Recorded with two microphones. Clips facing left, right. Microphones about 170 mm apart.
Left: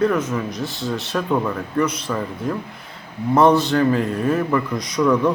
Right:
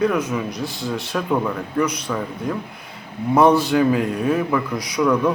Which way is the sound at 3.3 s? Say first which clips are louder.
Even; centre (ahead or behind).